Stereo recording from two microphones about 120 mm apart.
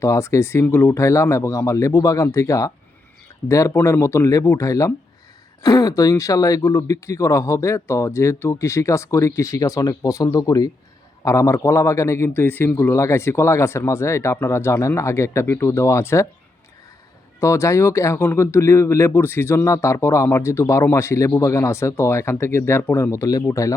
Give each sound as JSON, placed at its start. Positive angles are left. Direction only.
{"t": 0.0, "sound": "speech", "side_deg": 25}
{"t": 17.4, "sound": "speech", "side_deg": 25}